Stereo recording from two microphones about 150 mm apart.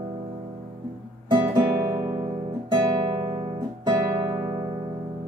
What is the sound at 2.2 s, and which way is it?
Guitar, 30° right (ahead or behind).